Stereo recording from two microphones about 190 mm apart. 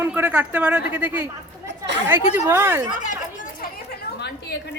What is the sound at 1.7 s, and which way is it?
Chatter, 65° right (ahead or behind).